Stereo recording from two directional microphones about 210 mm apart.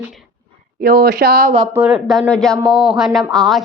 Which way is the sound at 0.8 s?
45° right (ahead or behind).